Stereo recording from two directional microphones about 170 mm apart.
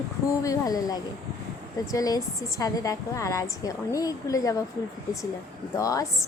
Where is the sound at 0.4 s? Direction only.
20° left (ahead or behind).